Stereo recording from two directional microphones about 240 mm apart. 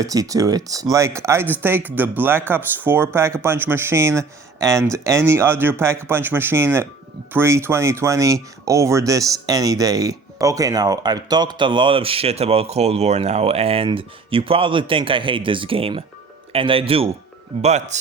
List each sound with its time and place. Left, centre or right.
0.0 s speech: centre